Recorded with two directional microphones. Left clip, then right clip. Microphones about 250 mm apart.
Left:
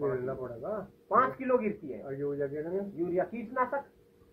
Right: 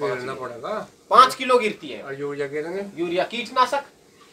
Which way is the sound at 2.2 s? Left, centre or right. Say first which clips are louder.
Right 5 dB; centre.